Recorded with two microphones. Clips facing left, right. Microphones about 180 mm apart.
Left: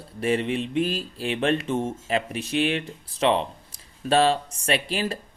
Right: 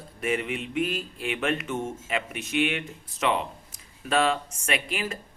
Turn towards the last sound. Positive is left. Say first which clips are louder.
# left 4 dB
turn(degrees=35)  # may be behind; listen again after turning